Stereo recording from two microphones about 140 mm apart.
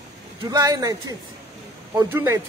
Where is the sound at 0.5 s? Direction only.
25° right (ahead or behind).